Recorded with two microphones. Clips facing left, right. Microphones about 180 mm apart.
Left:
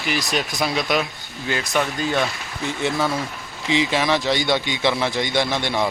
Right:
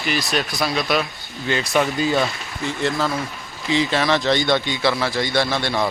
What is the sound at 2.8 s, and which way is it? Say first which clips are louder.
Speech: even; 10° left (ahead or behind).